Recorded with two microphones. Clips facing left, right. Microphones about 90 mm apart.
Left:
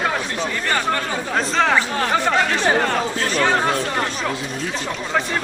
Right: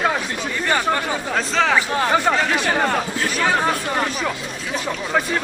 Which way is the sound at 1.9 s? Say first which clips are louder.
Right 1 dB; 10° right (ahead or behind).